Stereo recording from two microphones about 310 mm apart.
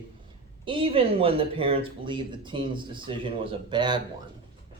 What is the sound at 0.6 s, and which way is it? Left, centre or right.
Speech, centre.